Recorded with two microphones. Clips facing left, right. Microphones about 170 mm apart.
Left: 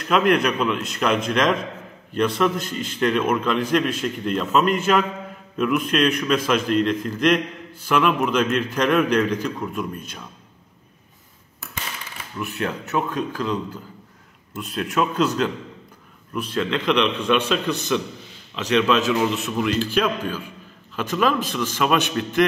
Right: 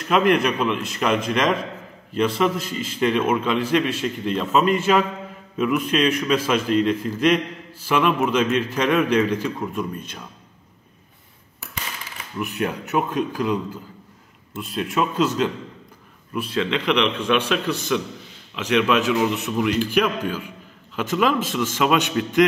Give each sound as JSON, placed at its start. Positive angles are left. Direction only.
{"t": 0.0, "sound": "a man's voice", "side_deg": 0}
{"t": 12.4, "sound": "a man's voice", "side_deg": -15}
{"t": 14.6, "sound": "a man's voice", "side_deg": 0}